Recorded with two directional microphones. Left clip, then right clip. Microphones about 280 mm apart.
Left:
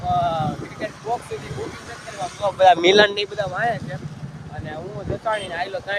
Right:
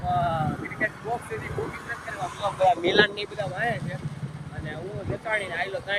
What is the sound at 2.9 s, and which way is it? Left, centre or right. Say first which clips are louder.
Speech: left 6 dB; centre.